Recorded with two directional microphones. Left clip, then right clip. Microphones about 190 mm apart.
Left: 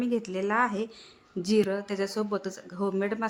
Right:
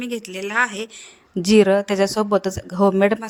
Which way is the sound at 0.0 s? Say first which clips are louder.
Right 2 dB; 50° right (ahead or behind).